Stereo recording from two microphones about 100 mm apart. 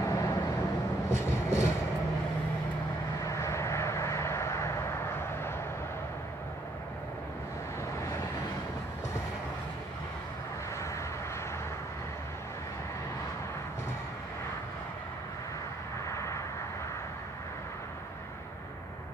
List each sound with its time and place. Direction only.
0.0 s vehicle: 30° left (ahead or behind)
3.2 s vehicle: 30° left (ahead or behind)
16.1 s vehicle: 30° left (ahead or behind)